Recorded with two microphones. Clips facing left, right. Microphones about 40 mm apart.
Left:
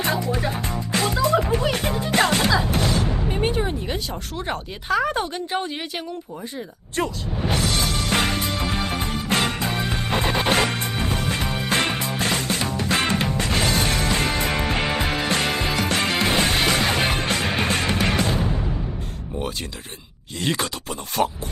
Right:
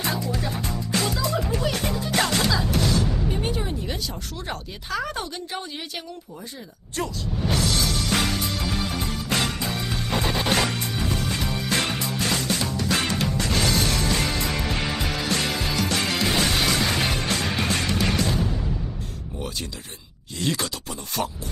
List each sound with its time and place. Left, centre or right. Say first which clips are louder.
0.0 s music: left 4 dB; left
4.4 s speech: left 8 dB; left
6.9 s music: left 3 dB; left
20.4 s speech: left 2 dB; left